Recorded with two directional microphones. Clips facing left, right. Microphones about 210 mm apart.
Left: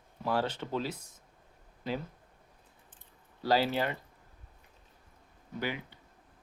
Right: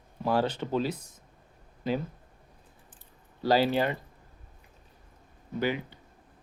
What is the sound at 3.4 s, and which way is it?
Speech, 15° right (ahead or behind).